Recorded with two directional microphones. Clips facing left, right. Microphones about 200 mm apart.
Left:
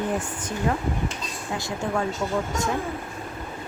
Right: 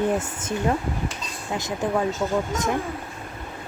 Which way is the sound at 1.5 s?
20° right (ahead or behind).